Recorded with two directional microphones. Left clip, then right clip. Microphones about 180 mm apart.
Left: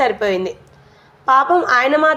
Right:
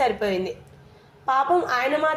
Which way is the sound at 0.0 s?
20° left (ahead or behind).